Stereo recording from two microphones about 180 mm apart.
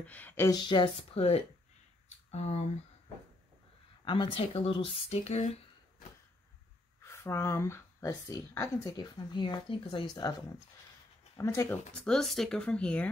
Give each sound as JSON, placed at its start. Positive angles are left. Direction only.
{"t": 0.0, "sound": "speech", "side_deg": 10}
{"t": 0.5, "sound": "speech", "side_deg": 25}
{"t": 4.0, "sound": "speech", "side_deg": 25}
{"t": 7.0, "sound": "speech", "side_deg": 15}
{"t": 11.3, "sound": "speech", "side_deg": 15}